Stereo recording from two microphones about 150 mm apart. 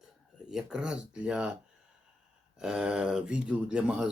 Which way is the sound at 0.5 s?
5° right (ahead or behind).